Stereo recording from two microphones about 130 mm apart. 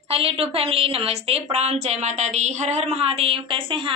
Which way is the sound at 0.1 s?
45° right (ahead or behind).